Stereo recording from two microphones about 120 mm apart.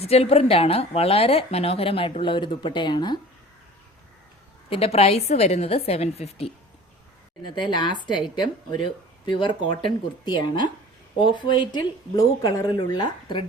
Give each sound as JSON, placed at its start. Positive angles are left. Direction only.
{"t": 0.0, "sound": "a woman's voice", "side_deg": 60}
{"t": 4.7, "sound": "a woman's voice", "side_deg": 55}
{"t": 7.5, "sound": "a woman's voice", "side_deg": 40}